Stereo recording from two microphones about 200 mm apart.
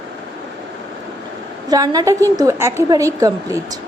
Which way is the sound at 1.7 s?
20° right (ahead or behind).